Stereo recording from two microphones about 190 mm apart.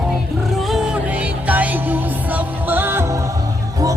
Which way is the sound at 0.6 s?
5° right (ahead or behind).